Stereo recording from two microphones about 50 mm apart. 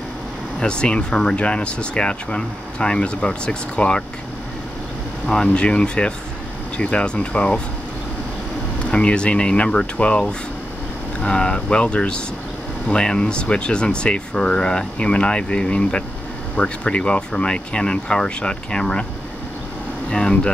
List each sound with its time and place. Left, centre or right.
0.6 s speech: centre
5.2 s speech: centre
8.9 s speech: left
20.1 s speech: centre